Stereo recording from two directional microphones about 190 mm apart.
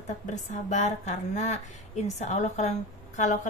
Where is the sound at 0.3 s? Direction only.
40° left (ahead or behind).